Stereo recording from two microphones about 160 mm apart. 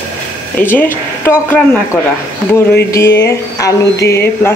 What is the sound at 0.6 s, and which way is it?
Speech, 10° left (ahead or behind).